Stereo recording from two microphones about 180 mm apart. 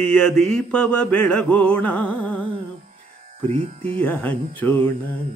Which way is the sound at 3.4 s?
30° right (ahead or behind).